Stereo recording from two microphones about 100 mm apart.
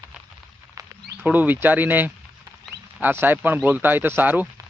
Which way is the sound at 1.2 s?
15° right (ahead or behind).